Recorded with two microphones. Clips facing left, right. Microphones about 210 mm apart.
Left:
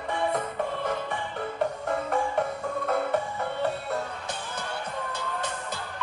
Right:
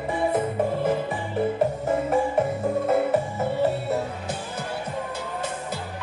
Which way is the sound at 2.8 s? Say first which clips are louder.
Right 4 dB; 5° right (ahead or behind).